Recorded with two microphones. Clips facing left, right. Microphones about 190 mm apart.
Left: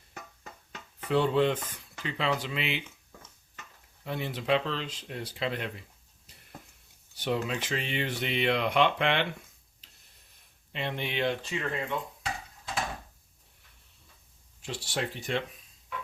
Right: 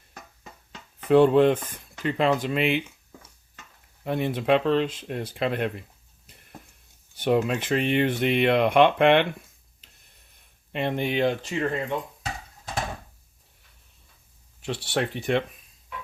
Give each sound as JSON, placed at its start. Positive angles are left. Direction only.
{"t": 1.1, "sound": "speech", "side_deg": -55}
{"t": 4.0, "sound": "speech", "side_deg": -55}
{"t": 7.2, "sound": "speech", "side_deg": -55}
{"t": 10.7, "sound": "speech", "side_deg": -50}
{"t": 14.6, "sound": "speech", "side_deg": -65}